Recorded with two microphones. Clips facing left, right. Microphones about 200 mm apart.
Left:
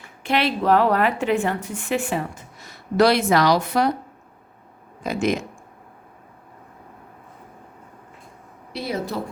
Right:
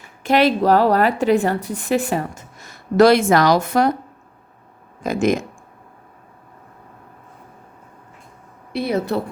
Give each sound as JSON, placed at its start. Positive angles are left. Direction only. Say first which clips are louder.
{"t": 0.2, "sound": "a woman's voice", "louder": "right 6 dB", "side_deg": -40}
{"t": 5.0, "sound": "speech", "louder": "right 4 dB", "side_deg": -45}
{"t": 8.7, "sound": "a woman's voice", "louder": "right 6 dB", "side_deg": -60}